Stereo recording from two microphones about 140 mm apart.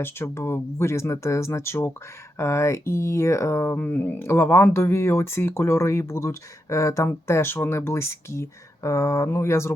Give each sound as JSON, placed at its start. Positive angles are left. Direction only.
{"t": 0.0, "sound": "speech", "side_deg": 15}